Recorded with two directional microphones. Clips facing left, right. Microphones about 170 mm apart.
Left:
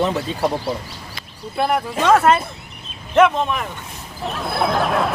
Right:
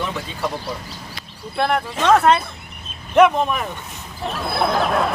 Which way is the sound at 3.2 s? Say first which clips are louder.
Right 1 dB; 10° right (ahead or behind).